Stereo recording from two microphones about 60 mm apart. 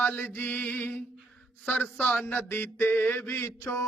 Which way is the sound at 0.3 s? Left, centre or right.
Left.